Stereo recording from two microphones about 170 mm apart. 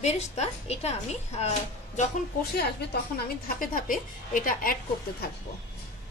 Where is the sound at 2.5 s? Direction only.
70° left (ahead or behind).